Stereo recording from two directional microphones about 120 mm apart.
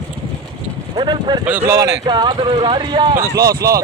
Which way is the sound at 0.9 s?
40° right (ahead or behind).